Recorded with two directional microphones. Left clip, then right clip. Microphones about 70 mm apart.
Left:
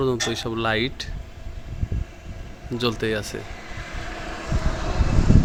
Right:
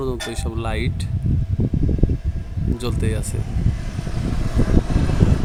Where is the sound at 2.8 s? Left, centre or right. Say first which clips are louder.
Left 6 dB; centre.